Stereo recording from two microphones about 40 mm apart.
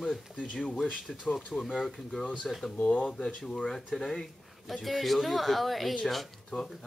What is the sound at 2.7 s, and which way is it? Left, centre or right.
Speech, left.